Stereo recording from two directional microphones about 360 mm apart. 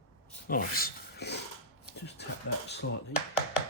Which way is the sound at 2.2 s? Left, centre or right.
Left.